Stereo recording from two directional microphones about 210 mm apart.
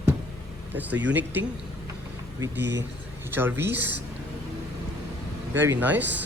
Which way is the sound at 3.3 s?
10° right (ahead or behind).